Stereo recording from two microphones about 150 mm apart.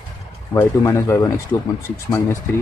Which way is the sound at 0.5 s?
20° left (ahead or behind).